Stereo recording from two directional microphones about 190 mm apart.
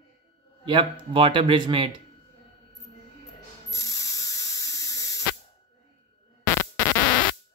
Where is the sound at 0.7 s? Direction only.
25° right (ahead or behind).